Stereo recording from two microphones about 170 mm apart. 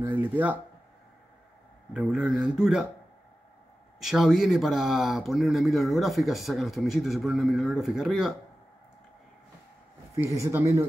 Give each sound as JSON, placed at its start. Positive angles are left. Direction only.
{"t": 0.0, "sound": "speech", "side_deg": -10}
{"t": 2.0, "sound": "speech", "side_deg": -5}
{"t": 4.0, "sound": "speech", "side_deg": 0}
{"t": 10.1, "sound": "speech", "side_deg": -15}